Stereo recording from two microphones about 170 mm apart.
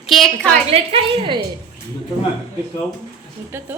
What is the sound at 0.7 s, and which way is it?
Speech, 35° right (ahead or behind).